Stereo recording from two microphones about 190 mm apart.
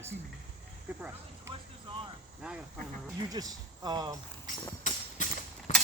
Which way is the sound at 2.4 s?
5° right (ahead or behind).